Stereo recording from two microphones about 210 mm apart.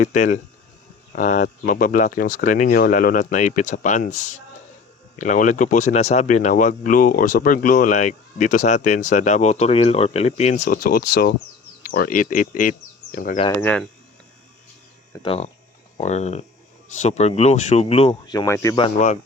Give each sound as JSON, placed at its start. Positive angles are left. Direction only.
{"t": 0.0, "sound": "speech", "side_deg": 35}
{"t": 13.6, "sound": "speech", "side_deg": 10}
{"t": 15.1, "sound": "speech", "side_deg": 25}
{"t": 18.8, "sound": "speech", "side_deg": 35}